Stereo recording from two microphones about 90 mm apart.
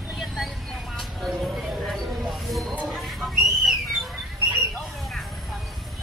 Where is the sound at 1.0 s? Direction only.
Centre (ahead or behind).